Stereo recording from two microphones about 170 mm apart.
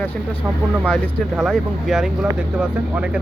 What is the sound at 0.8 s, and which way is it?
Speech, centre (ahead or behind).